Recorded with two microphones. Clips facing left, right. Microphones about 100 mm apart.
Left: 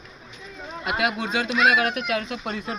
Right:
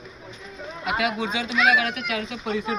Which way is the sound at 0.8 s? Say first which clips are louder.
Even; 55° left (ahead or behind).